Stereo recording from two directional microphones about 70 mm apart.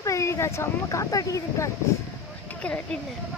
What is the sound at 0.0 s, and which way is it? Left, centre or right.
Speech, left.